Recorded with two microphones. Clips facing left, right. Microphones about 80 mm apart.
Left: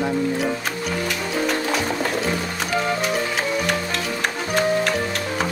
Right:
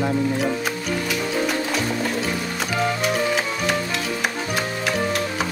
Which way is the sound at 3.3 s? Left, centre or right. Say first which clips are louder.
Even; centre.